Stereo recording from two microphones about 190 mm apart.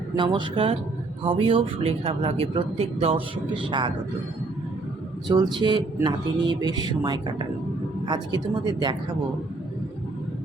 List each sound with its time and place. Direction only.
0.2 s speech: 25° right (ahead or behind)
5.3 s speech: 20° right (ahead or behind)